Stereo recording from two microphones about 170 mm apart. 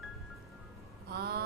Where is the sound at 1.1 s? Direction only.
70° right (ahead or behind).